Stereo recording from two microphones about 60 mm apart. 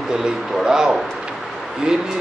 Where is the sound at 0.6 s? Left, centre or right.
Centre.